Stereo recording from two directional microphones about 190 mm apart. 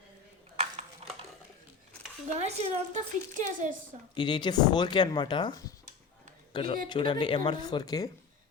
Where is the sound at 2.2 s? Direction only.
35° right (ahead or behind).